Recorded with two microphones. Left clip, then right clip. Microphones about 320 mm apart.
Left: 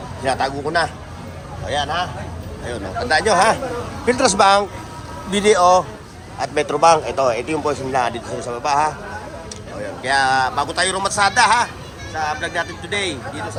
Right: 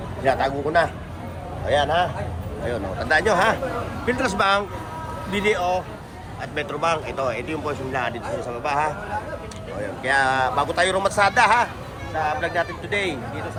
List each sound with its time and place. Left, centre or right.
0.3 s a man's voice: centre
5.3 s speech: left
6.4 s speech: centre
10.0 s a man's voice: centre